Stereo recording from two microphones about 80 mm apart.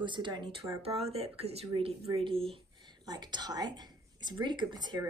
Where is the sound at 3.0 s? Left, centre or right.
Right.